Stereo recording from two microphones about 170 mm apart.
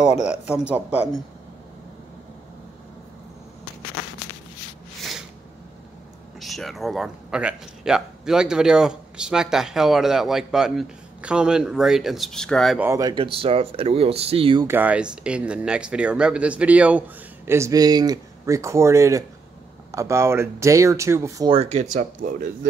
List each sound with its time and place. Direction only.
0.2 s speech: 5° right (ahead or behind)
6.4 s speech: centre (ahead or behind)
12.7 s speech: 10° right (ahead or behind)
13.0 s speech: 30° right (ahead or behind)
14.7 s speech: 10° right (ahead or behind)
21.5 s speech: 40° right (ahead or behind)